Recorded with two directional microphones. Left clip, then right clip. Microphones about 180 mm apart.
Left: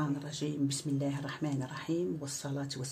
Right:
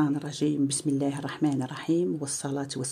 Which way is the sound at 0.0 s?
40° right (ahead or behind).